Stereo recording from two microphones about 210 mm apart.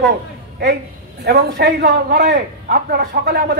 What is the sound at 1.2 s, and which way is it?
A man's voice, 50° right (ahead or behind).